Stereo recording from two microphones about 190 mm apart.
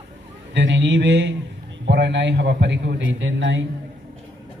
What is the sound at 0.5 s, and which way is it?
A man's voice, 70° right (ahead or behind).